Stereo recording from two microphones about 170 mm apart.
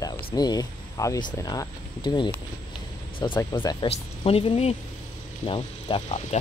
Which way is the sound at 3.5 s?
30° left (ahead or behind).